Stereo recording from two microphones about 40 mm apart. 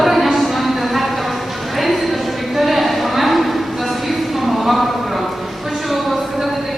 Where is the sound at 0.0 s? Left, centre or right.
Centre.